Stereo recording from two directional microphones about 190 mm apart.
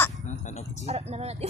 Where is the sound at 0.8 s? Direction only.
35° right (ahead or behind).